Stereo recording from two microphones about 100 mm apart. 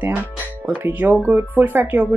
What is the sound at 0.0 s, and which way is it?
Speech, 15° right (ahead or behind).